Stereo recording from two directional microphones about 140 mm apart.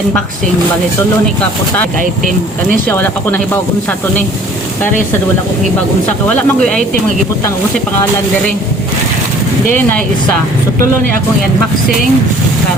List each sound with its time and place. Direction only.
1.4 s speech: 10° left (ahead or behind)
6.2 s speech: 10° left (ahead or behind)
10.8 s speech: 90° right